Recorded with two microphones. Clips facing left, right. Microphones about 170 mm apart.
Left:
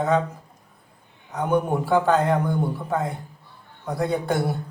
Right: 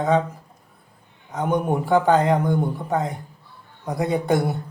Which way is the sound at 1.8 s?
15° right (ahead or behind).